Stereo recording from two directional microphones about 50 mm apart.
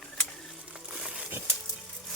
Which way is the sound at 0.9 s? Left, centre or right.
Centre.